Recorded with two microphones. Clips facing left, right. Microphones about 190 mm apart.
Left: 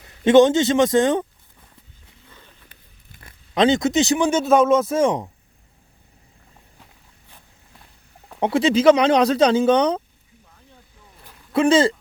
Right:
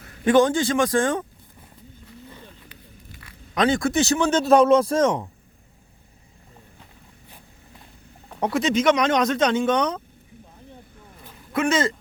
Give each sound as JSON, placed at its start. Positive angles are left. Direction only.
{"t": 0.0, "sound": "a man's voice", "side_deg": 25}
{"t": 2.6, "sound": "zipper", "side_deg": 50}
{"t": 3.5, "sound": "speech", "side_deg": 25}
{"t": 5.0, "sound": "speech", "side_deg": 15}
{"t": 8.4, "sound": "speech", "side_deg": 25}
{"t": 11.5, "sound": "speech", "side_deg": 30}